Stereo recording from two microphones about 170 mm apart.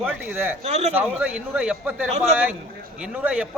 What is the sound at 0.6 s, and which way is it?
Speech, 40° right (ahead or behind).